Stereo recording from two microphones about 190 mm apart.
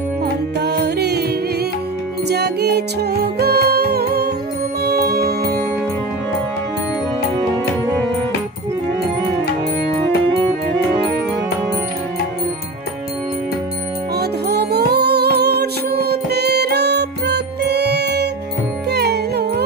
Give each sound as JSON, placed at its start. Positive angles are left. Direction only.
{"t": 0.2, "sound": "music", "side_deg": -60}
{"t": 2.2, "sound": "music", "side_deg": -60}
{"t": 14.1, "sound": "music", "side_deg": -60}